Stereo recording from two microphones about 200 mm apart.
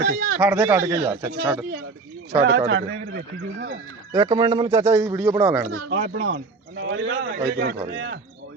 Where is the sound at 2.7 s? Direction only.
60° right (ahead or behind).